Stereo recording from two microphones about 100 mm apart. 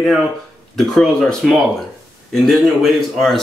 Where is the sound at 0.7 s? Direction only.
Centre (ahead or behind).